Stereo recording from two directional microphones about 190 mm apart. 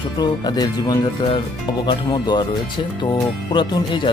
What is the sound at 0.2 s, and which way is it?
Speech, 20° left (ahead or behind).